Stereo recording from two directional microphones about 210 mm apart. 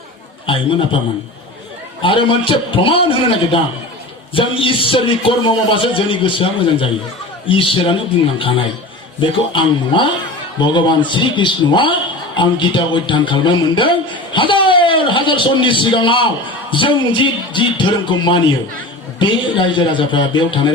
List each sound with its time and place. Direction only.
0.4 s a man's voice: 25° left (ahead or behind)
2.0 s a man's voice: 25° left (ahead or behind)